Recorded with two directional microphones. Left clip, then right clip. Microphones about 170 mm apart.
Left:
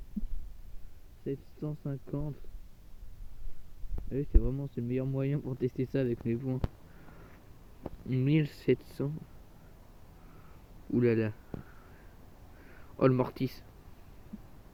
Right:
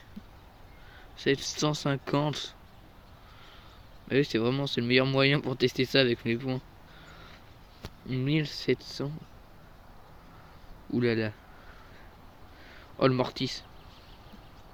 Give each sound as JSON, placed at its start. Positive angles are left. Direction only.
{"t": 1.2, "sound": "speech", "side_deg": -10}
{"t": 4.1, "sound": "speech", "side_deg": -5}
{"t": 8.0, "sound": "speech", "side_deg": 5}
{"t": 10.9, "sound": "speech", "side_deg": -5}
{"t": 13.0, "sound": "speech", "side_deg": -5}